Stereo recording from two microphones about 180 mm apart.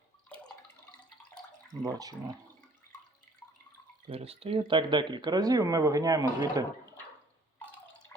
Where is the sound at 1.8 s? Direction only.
20° right (ahead or behind).